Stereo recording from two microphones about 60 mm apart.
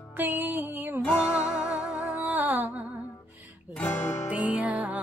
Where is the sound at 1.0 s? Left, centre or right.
Left.